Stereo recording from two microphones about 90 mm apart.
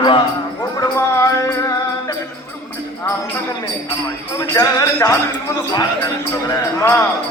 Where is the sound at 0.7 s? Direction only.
35° left (ahead or behind).